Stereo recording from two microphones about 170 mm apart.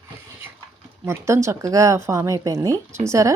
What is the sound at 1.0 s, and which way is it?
Speech, 15° right (ahead or behind).